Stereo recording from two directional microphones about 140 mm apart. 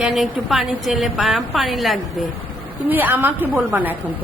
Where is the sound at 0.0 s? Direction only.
Centre (ahead or behind).